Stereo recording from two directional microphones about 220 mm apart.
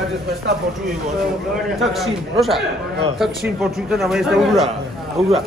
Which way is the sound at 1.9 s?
Centre (ahead or behind).